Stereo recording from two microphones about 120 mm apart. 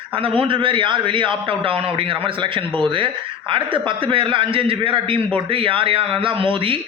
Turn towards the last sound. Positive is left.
turn(degrees=-45)  # may be behind; listen again after turning